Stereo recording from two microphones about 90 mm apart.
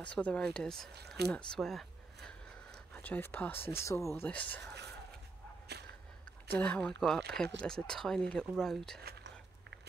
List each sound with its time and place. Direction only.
0.0 s speech: 15° left (ahead or behind)
2.9 s speech: 20° left (ahead or behind)
4.3 s speech: 15° left (ahead or behind)
6.5 s speech: 15° left (ahead or behind)